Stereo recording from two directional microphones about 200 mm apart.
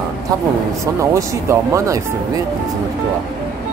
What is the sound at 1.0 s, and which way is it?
Speech, 15° right (ahead or behind).